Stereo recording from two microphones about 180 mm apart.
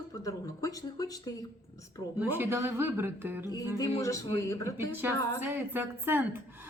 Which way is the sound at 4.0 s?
20° left (ahead or behind).